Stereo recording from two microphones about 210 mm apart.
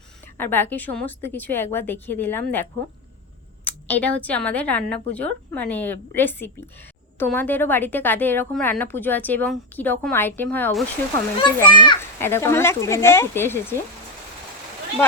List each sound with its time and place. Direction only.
0.3 s a woman's voice: 10° left (ahead or behind)
11.3 s a child's voice: 20° left (ahead or behind)
12.2 s a woman's voice: 10° left (ahead or behind)